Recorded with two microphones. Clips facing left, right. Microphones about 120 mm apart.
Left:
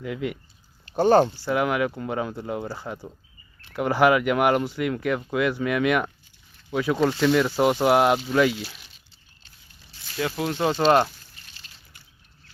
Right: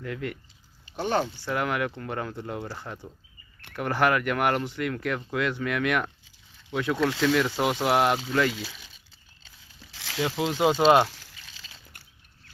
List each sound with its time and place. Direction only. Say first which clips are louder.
0.0 s speech: left 4 dB; 10° left (ahead or behind)
0.9 s speech: left 9 dB; 40° left (ahead or behind)
1.5 s speech: left 5 dB; 5° left (ahead or behind)
9.9 s a sound: right 6 dB; 90° right
10.2 s speech: even; 20° right (ahead or behind)
10.7 s speech: even; 10° right (ahead or behind)
11.9 s a sound: right 1 dB; 50° right (ahead or behind)